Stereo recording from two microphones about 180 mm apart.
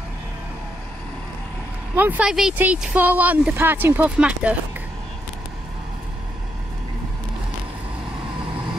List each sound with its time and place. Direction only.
2.0 s speech: 10° right (ahead or behind)